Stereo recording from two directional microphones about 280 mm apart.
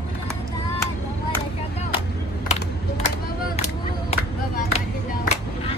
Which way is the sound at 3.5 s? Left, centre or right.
Left.